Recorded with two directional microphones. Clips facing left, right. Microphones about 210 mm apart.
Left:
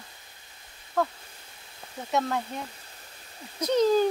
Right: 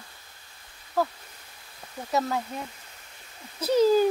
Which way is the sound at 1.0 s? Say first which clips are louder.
Right 1 dB; 5° right (ahead or behind).